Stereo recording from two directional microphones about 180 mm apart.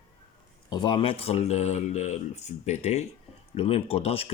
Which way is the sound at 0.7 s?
25° left (ahead or behind).